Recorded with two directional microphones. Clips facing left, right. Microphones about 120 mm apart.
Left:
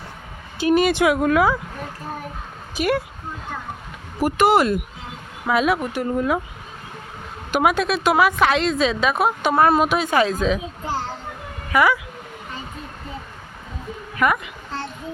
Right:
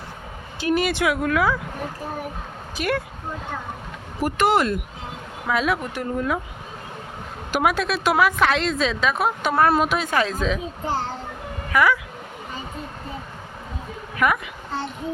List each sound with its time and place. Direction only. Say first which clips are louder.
0.6 s speech: left 4 dB; 20° left (ahead or behind)
2.7 s speech: left 3 dB; 15° left (ahead or behind)
4.2 s speech: left 3 dB; 5° left (ahead or behind)
7.5 s a woman's voice: left 2 dB; centre (ahead or behind)
11.7 s speech: left 1 dB; 10° left (ahead or behind)
14.2 s a woman's voice: left 1 dB; centre (ahead or behind)